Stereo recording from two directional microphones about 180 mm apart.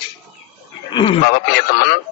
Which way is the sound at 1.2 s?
60° left (ahead or behind).